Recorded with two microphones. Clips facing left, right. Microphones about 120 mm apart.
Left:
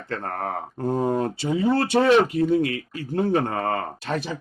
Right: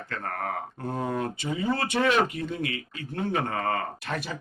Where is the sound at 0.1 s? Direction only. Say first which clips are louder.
Left 4 dB; 35° left (ahead or behind).